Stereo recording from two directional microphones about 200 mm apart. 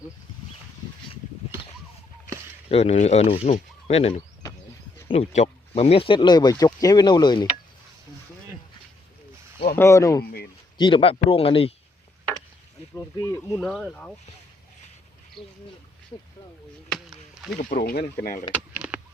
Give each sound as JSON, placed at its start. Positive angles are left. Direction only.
{"t": 2.6, "sound": "speech", "side_deg": 30}
{"t": 9.7, "sound": "speech", "side_deg": 15}
{"t": 13.1, "sound": "speech", "side_deg": 15}
{"t": 13.6, "sound": "speech", "side_deg": 0}
{"t": 17.6, "sound": "speech", "side_deg": 40}
{"t": 18.5, "sound": "a sound", "side_deg": -5}